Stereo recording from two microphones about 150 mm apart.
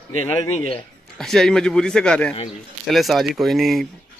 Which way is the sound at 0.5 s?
45° left (ahead or behind).